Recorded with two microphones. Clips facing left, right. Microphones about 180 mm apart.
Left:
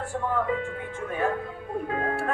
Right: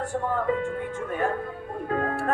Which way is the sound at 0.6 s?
40° right (ahead or behind).